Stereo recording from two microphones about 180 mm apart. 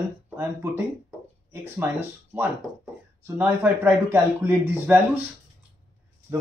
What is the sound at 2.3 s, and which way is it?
Speech, 10° right (ahead or behind).